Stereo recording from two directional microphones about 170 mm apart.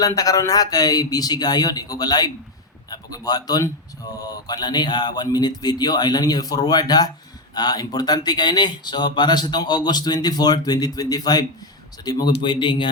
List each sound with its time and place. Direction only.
0.0 s speech: 20° left (ahead or behind)